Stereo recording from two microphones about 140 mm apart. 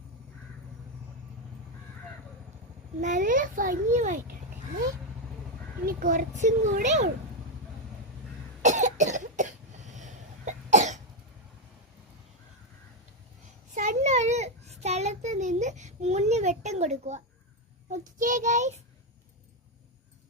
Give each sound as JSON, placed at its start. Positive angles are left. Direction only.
{"t": 3.0, "sound": "a child's voice", "side_deg": -65}
{"t": 5.8, "sound": "a child's voice", "side_deg": -85}
{"t": 8.6, "sound": "cough", "side_deg": -60}
{"t": 13.7, "sound": "child singing", "side_deg": -60}
{"t": 17.9, "sound": "a child's voice", "side_deg": -70}